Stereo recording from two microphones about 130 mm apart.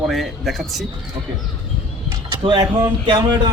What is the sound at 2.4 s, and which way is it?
Speech, 35° right (ahead or behind).